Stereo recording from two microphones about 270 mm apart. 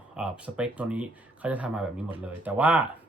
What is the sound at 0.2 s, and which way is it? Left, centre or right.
Speech, centre.